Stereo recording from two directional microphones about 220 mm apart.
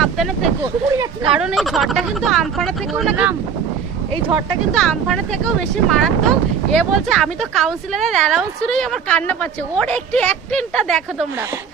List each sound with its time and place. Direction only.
0.0 s vehicle: centre (ahead or behind)
0.6 s speech: 15° right (ahead or behind)
1.3 s speech: 5° right (ahead or behind)
4.4 s speech: centre (ahead or behind)